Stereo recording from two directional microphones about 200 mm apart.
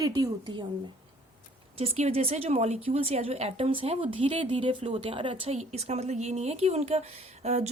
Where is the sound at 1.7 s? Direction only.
30° right (ahead or behind).